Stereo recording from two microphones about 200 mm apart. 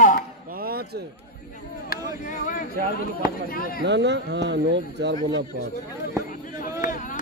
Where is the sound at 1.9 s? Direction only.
40° left (ahead or behind).